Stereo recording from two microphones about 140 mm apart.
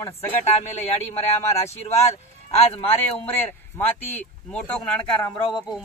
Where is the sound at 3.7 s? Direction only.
10° left (ahead or behind).